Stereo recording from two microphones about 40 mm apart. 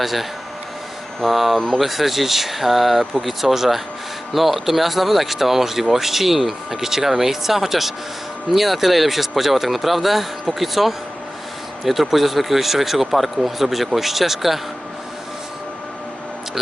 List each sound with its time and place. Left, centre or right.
0.0 s speech: centre
1.5 s speech: centre
1.8 s speech: centre